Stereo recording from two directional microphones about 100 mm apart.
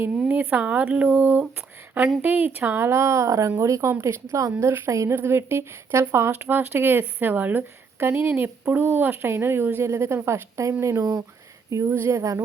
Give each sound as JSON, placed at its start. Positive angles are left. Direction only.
{"t": 0.1, "sound": "a woman's voice", "side_deg": -15}